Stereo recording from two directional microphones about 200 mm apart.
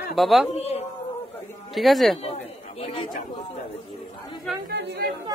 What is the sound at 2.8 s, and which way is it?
Speech, 30° left (ahead or behind).